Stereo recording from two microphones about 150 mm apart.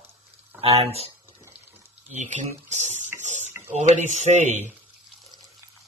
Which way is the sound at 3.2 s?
50° right (ahead or behind).